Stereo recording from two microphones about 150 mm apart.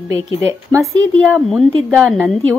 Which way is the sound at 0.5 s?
20° right (ahead or behind).